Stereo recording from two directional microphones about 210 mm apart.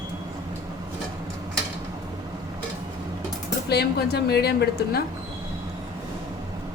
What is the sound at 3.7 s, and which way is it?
A woman's voice, 50° left (ahead or behind).